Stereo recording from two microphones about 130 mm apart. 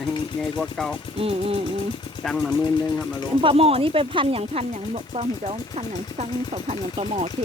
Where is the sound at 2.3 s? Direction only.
Centre (ahead or behind).